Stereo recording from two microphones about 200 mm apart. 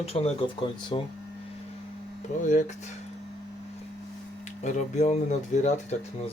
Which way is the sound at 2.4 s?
40° left (ahead or behind).